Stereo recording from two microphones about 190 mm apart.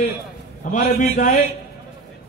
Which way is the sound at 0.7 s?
40° left (ahead or behind).